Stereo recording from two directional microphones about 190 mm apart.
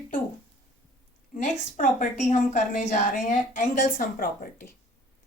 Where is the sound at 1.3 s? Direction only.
45° left (ahead or behind).